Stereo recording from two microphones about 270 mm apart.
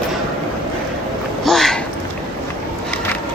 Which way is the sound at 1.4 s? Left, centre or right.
Centre.